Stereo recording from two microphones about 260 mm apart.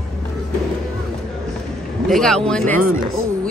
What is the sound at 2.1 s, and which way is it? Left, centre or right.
Speech, centre.